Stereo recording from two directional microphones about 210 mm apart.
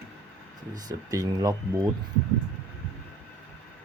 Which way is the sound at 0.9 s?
15° right (ahead or behind).